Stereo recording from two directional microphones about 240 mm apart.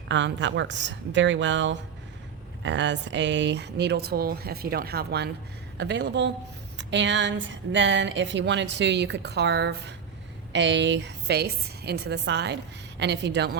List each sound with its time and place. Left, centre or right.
0.1 s speech: right